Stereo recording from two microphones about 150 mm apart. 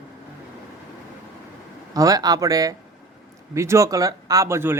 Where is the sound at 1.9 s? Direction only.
25° right (ahead or behind).